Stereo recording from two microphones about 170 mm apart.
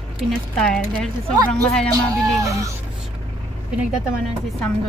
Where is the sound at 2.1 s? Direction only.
20° right (ahead or behind).